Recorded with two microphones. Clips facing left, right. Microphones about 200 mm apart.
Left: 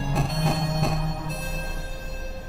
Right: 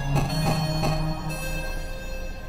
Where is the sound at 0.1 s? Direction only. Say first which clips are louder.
Right 1 dB; centre (ahead or behind).